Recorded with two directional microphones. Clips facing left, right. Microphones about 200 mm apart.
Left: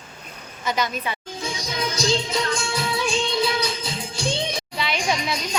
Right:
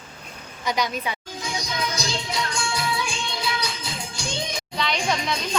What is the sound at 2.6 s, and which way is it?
Music, 25° left (ahead or behind).